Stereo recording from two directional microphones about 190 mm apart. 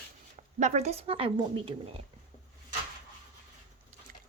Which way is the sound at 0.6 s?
40° right (ahead or behind).